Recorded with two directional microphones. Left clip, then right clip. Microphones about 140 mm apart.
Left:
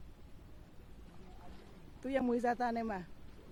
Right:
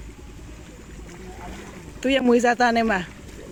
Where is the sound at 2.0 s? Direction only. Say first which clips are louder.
Right 16 dB; 10° left (ahead or behind).